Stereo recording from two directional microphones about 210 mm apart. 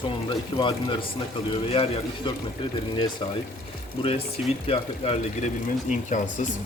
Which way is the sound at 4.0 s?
25° left (ahead or behind).